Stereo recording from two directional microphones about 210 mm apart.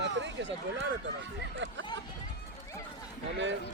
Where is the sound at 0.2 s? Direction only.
60° right (ahead or behind).